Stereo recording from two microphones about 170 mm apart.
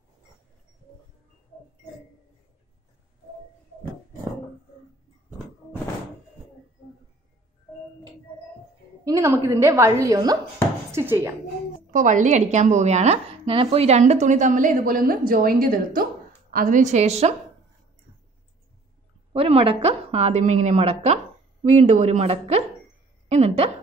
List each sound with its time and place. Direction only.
9.0 s a woman's voice: 20° right (ahead or behind)
11.9 s speech: 50° right (ahead or behind)
19.3 s a woman's voice: 35° right (ahead or behind)